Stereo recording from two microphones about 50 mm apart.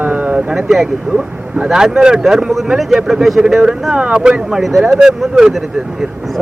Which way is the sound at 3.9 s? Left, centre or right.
Right.